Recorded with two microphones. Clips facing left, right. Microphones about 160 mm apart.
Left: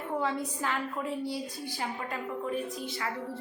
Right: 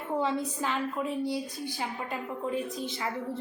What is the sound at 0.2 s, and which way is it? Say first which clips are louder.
A woman's voice: right 3 dB; 20° right (ahead or behind).